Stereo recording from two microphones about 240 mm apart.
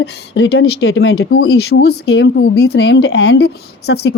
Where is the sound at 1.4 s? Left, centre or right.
Left.